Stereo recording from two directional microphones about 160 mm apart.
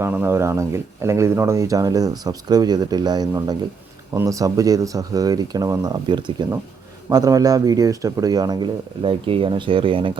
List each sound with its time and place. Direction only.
0.0 s speech: 15° right (ahead or behind); by 10.1 s 35° right (ahead or behind)